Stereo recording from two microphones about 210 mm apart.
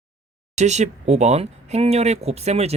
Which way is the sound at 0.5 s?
35° right (ahead or behind).